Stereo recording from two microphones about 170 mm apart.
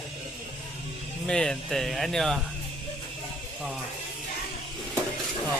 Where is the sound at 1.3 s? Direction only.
5° left (ahead or behind).